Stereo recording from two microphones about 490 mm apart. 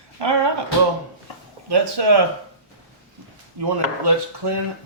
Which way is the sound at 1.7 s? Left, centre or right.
Right.